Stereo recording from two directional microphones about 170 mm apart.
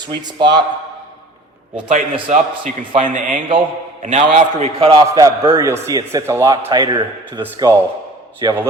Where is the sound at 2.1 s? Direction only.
30° right (ahead or behind).